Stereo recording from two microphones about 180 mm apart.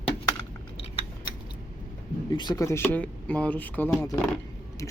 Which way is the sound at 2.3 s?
25° left (ahead or behind).